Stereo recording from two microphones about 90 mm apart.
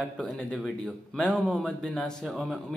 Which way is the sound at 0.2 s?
10° left (ahead or behind).